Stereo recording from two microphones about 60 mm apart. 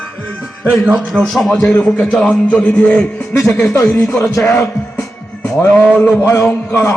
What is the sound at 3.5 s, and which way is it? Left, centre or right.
Speech, left.